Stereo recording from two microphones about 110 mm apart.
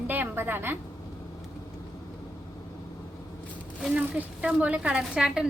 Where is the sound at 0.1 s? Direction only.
20° right (ahead or behind).